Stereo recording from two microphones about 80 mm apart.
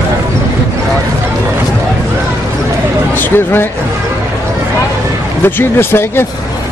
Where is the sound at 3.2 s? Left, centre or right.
Left.